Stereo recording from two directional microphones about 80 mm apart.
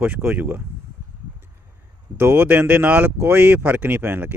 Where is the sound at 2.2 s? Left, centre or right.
Right.